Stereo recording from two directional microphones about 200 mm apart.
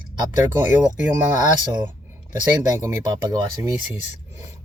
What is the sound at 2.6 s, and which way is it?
Speech, 15° right (ahead or behind).